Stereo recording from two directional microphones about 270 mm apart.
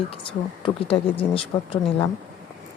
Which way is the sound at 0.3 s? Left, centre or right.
Left.